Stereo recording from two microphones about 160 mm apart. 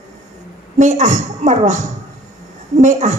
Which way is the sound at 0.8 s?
50° right (ahead or behind).